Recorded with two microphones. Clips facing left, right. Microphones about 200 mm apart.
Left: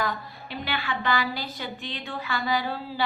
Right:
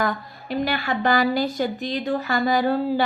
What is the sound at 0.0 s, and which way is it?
A woman's voice, 45° right (ahead or behind).